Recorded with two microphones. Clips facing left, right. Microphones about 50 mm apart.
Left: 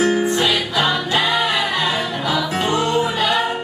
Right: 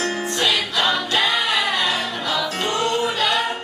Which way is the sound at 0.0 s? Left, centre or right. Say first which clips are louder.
Left 5 dB; centre.